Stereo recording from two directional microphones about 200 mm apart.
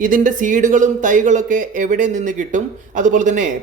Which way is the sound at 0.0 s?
40° right (ahead or behind).